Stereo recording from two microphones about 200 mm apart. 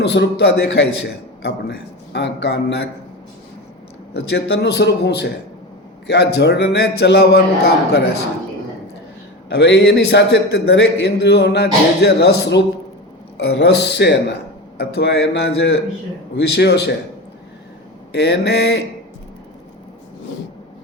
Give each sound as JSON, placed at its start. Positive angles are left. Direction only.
{"t": 0.0, "sound": "a man's voice", "side_deg": 60}
{"t": 4.1, "sound": "a man's voice", "side_deg": 55}
{"t": 9.5, "sound": "a man's voice", "side_deg": 60}
{"t": 18.1, "sound": "a man's voice", "side_deg": 55}